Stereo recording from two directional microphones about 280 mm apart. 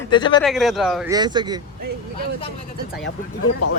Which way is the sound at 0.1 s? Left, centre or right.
Centre.